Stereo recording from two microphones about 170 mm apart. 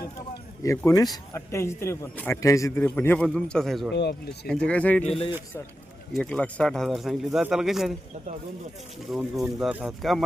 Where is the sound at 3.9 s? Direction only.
80° left.